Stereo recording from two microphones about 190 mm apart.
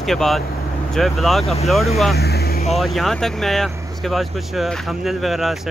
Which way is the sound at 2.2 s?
55° left (ahead or behind).